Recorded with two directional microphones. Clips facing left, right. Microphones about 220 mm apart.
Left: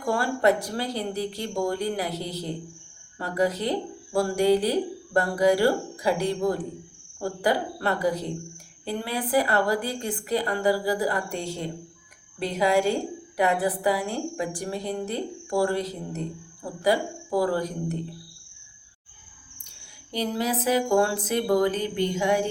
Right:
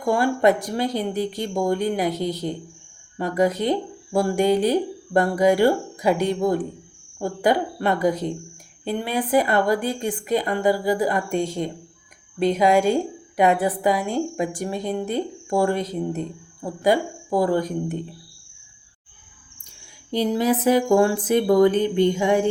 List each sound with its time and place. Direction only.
0.0 s speech: 20° right (ahead or behind)
3.2 s speech: 20° right (ahead or behind)
20.1 s speech: 20° right (ahead or behind)